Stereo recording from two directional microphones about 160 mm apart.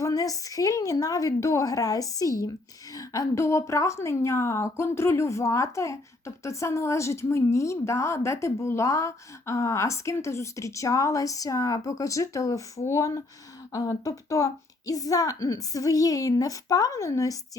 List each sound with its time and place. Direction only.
0.0 s a woman's voice: 20° left (ahead or behind)